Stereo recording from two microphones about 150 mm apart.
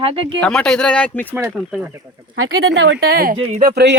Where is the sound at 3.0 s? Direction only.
90° right.